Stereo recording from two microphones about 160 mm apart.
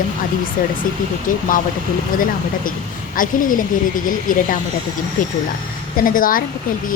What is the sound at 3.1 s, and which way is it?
Speech, 60° left (ahead or behind).